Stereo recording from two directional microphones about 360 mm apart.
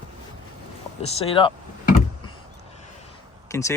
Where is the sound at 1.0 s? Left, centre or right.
Centre.